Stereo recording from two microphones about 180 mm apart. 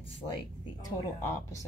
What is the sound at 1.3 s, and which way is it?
Speech, 15° left (ahead or behind).